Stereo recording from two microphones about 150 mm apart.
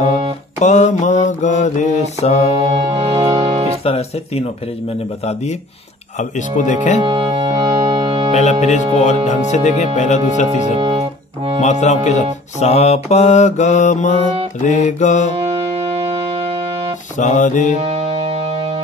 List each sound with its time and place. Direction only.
0.6 s music: 50° left (ahead or behind)
2.7 s music: 40° right (ahead or behind)
3.8 s speech: 40° left (ahead or behind)
6.1 s music: 55° left (ahead or behind)
7.0 s music: 35° right (ahead or behind)
8.3 s music: 50° left (ahead or behind)
10.8 s music: 35° right (ahead or behind)
11.6 s music: 50° left (ahead or behind)
15.3 s music: 45° right (ahead or behind)
17.2 s music: 55° left (ahead or behind)
17.7 s music: 40° right (ahead or behind)